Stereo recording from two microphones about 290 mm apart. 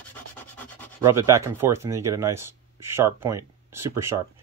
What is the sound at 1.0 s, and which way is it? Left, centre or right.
Speech, centre.